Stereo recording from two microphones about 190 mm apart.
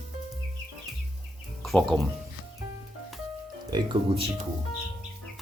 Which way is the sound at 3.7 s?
25° right (ahead or behind).